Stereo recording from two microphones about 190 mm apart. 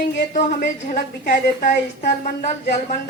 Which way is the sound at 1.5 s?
40° left (ahead or behind).